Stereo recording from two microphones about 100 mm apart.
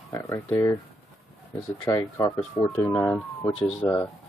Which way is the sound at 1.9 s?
40° left (ahead or behind).